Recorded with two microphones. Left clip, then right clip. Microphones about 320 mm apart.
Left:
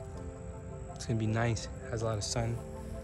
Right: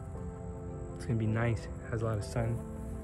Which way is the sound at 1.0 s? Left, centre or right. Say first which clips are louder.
Left 1 dB; centre.